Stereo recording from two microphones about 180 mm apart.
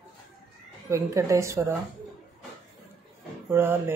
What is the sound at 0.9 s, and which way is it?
Speech, 15° right (ahead or behind).